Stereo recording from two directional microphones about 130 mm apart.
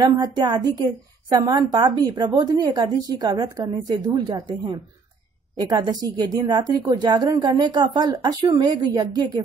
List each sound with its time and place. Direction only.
0.0 s a woman's voice: 30° right (ahead or behind)